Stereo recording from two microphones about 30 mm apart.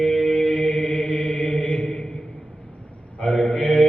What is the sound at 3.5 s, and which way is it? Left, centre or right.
Mantra, left.